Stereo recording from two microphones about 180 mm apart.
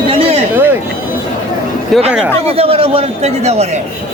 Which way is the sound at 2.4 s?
35° right (ahead or behind).